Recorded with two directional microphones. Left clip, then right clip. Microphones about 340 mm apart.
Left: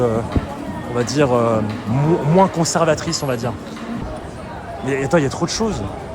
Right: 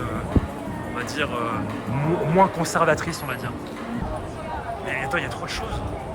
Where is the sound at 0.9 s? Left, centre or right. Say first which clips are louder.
Left 10 dB; centre.